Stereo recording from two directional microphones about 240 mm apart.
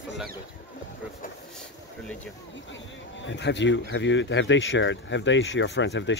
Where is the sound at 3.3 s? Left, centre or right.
Left.